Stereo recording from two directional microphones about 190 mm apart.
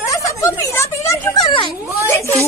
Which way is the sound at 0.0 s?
15° left (ahead or behind).